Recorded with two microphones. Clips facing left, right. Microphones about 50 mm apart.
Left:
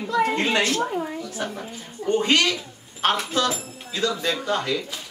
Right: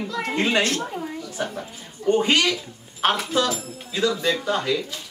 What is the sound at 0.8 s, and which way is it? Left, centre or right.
Speech, centre.